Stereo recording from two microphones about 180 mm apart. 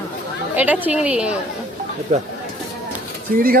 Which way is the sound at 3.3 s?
55° right (ahead or behind).